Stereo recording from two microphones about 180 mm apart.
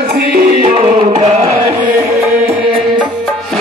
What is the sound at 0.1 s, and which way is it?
Music, 55° right (ahead or behind).